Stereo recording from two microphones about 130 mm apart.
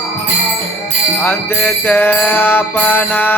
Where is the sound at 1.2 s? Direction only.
15° left (ahead or behind).